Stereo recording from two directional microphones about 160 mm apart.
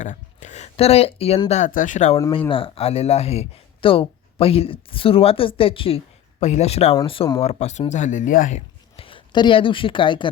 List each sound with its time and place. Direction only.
0.0 s speech: 50° left (ahead or behind)
1.5 s speech: 50° left (ahead or behind)
2.5 s speech: 35° left (ahead or behind)
7.4 s speech: 45° left (ahead or behind)
9.0 s speech: 35° left (ahead or behind)